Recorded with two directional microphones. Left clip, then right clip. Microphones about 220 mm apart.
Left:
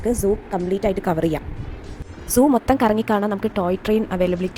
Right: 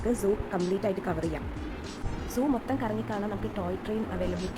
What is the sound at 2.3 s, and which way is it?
A woman's voice, 30° left (ahead or behind).